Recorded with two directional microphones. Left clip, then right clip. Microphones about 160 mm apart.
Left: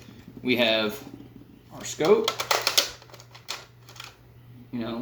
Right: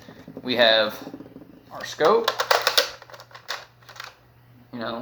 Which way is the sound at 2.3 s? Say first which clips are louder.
Right 4 dB; 5° right (ahead or behind).